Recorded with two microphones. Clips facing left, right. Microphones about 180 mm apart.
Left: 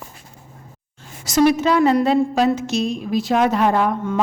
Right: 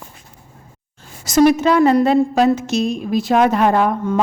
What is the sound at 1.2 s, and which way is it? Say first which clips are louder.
A woman's voice: right 3 dB; 45° right (ahead or behind).